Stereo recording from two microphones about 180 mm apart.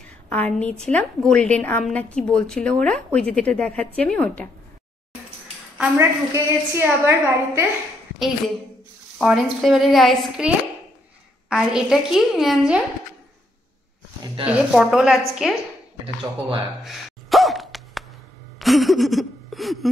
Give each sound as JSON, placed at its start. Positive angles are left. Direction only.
{"t": 0.3, "sound": "a woman's voice", "side_deg": 10}
{"t": 5.8, "sound": "a woman's voice", "side_deg": -15}
{"t": 9.2, "sound": "a woman's voice", "side_deg": 0}
{"t": 14.2, "sound": "speech", "side_deg": -30}
{"t": 14.7, "sound": "a woman's voice", "side_deg": 0}
{"t": 16.8, "sound": "gasp", "side_deg": 0}
{"t": 18.6, "sound": "a sound", "side_deg": 0}